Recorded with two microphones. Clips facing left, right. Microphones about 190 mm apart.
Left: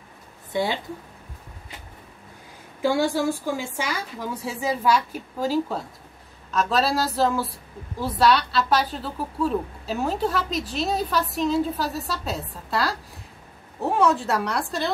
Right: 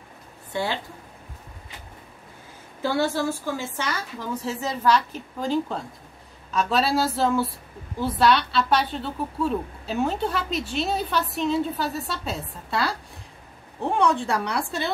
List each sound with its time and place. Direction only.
0.5 s a woman's voice: 15° left (ahead or behind)
2.8 s a woman's voice: 15° left (ahead or behind)